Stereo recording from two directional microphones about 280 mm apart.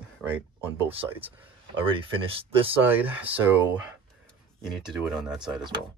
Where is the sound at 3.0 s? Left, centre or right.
Centre.